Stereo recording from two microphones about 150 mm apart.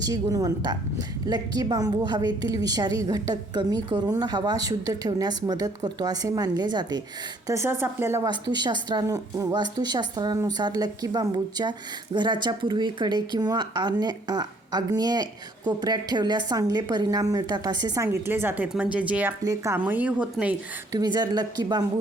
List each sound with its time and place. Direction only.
0.0 s speech: 25° right (ahead or behind)
7.4 s speech: 20° right (ahead or behind)
8.3 s speech: 30° right (ahead or behind); by 19.3 s 10° right (ahead or behind)
19.4 s speech: 20° right (ahead or behind)
20.9 s speech: 25° right (ahead or behind)